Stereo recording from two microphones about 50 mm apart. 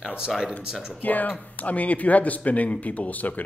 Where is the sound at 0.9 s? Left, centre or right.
Left.